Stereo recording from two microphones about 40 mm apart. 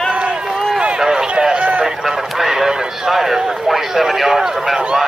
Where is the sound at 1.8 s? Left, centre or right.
Centre.